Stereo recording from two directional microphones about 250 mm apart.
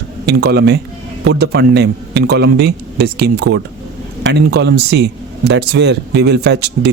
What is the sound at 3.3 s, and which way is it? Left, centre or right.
Speech, right.